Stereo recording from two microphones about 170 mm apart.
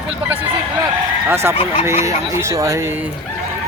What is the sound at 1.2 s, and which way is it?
A man's voice, 15° right (ahead or behind).